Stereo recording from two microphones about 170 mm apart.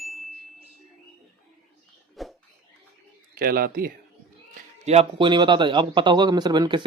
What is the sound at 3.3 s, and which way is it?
Speech, 55° right (ahead or behind).